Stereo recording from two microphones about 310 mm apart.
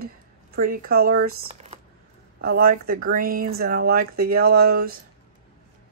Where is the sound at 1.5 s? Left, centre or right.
Right.